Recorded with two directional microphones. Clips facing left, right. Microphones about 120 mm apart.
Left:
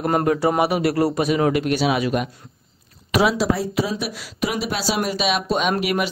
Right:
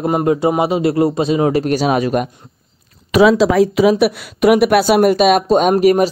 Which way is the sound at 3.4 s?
90° right.